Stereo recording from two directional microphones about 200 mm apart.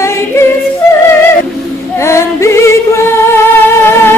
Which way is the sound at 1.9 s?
15° left (ahead or behind).